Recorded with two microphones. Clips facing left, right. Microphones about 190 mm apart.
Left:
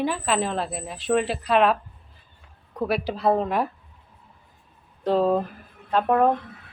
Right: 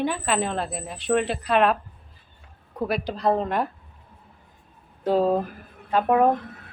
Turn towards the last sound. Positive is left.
turn(degrees=-5)  # may be behind; listen again after turning